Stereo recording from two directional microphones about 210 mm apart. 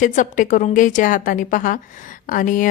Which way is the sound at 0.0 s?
40° left (ahead or behind).